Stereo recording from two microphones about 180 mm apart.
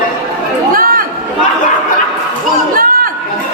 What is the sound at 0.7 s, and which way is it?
Chatter, 50° right (ahead or behind).